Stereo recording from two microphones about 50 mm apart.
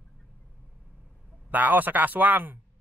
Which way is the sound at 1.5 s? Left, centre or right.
Right.